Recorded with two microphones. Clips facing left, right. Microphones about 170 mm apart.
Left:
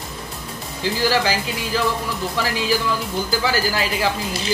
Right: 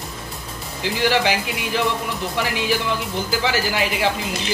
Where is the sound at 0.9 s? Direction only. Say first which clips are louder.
Right 1 dB; 20° right (ahead or behind).